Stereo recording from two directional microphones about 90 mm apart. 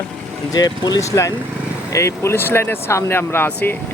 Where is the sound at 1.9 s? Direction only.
30° left (ahead or behind).